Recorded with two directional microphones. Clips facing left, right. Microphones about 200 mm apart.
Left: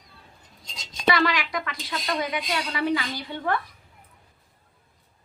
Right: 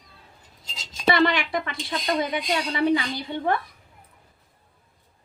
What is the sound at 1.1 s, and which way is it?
A woman's voice, 25° right (ahead or behind).